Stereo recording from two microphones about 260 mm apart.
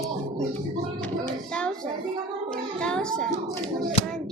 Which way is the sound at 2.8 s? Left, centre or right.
Centre.